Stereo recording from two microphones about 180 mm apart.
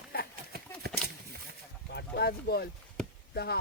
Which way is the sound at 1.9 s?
65° left (ahead or behind).